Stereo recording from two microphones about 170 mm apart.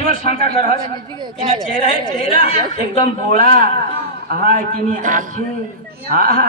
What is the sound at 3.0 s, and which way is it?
A man's voice, 35° left (ahead or behind).